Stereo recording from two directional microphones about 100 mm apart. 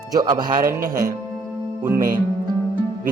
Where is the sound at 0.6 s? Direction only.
30° right (ahead or behind).